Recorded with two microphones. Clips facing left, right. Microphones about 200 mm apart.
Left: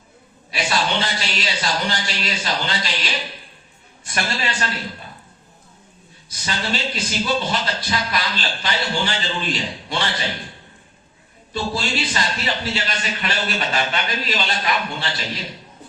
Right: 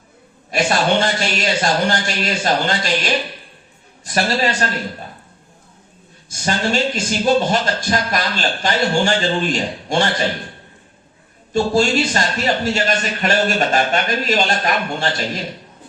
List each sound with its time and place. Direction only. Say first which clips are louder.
0.5 s a man's voice: right 6 dB; 50° right (ahead or behind)
4.0 s a man's voice: right 7 dB; 40° right (ahead or behind)
6.2 s a man's voice: right 7 dB; 50° right (ahead or behind)
11.5 s a man's voice: right 9 dB; 45° right (ahead or behind)